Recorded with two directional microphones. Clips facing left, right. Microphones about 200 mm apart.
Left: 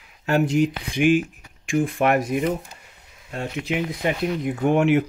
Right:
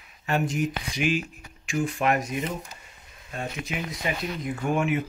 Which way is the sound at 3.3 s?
65° left (ahead or behind).